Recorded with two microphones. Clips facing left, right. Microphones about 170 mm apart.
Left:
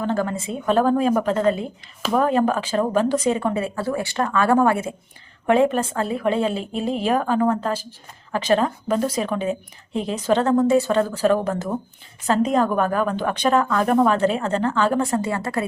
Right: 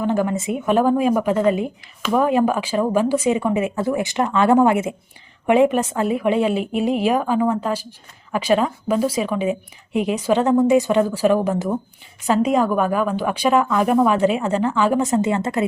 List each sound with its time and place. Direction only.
0.0 s a woman's voice: 15° right (ahead or behind)